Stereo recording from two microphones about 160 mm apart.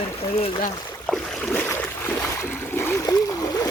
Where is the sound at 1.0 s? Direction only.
5° left (ahead or behind).